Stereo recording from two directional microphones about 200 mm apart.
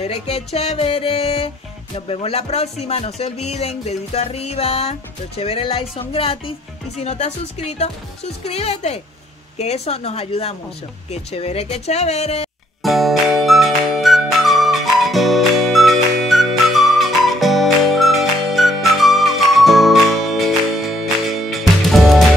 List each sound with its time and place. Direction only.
0.0 s music: 30° left (ahead or behind)
2.0 s speech: 30° left (ahead or behind)
5.4 s music: 30° left (ahead or behind)
7.0 s speech: 35° left (ahead or behind)
12.8 s music: centre (ahead or behind)